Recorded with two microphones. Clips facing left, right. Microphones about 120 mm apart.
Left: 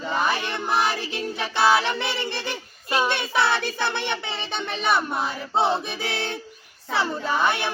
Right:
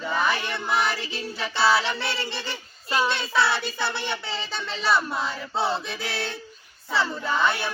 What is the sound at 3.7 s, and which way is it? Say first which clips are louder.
Child singing: left 2 dB; 20° left (ahead or behind).